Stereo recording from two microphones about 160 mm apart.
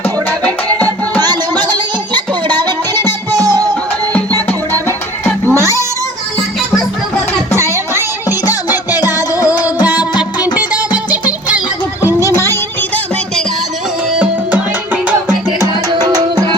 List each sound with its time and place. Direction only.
0.0 s music: 10° left (ahead or behind)
1.6 s music: 25° right (ahead or behind)
4.4 s music: 15° left (ahead or behind)
5.5 s cat: 15° right (ahead or behind)
7.6 s music: 15° right (ahead or behind)
9.1 s music: 20° left (ahead or behind)
10.6 s music: 10° right (ahead or behind)
12.2 s music: 20° left (ahead or behind)
15.9 s music: 25° right (ahead or behind)